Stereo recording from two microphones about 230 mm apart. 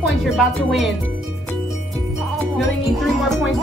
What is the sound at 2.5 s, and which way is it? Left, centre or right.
Music, centre.